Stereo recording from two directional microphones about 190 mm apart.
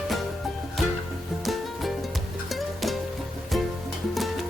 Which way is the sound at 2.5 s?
Centre (ahead or behind).